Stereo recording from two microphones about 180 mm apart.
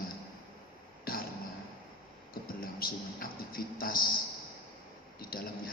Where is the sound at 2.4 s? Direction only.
55° left (ahead or behind).